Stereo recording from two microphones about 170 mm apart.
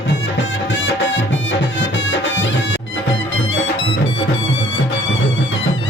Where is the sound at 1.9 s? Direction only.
90° left.